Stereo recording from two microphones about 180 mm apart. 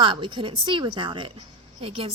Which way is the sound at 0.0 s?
30° right (ahead or behind).